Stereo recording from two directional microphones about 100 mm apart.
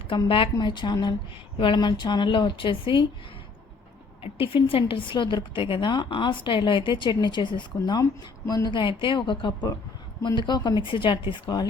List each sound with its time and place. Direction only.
0.3 s a woman's voice: 65° left (ahead or behind)
0.6 s a woman's voice: 50° left (ahead or behind)
4.2 s a woman's voice: 65° left (ahead or behind); by 8.8 s 40° left (ahead or behind)
8.8 s a woman's voice: 55° left (ahead or behind)